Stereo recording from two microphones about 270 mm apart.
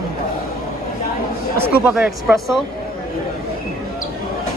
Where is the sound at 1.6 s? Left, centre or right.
Centre.